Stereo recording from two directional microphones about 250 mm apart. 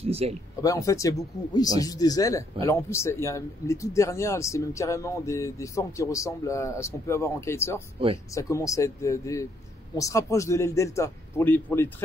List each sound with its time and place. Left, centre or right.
0.0 s speech: right
0.6 s speech: centre